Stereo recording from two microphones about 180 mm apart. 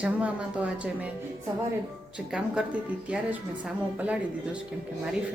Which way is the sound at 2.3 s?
5° right (ahead or behind).